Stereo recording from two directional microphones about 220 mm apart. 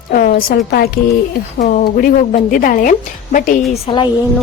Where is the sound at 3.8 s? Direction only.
20° left (ahead or behind).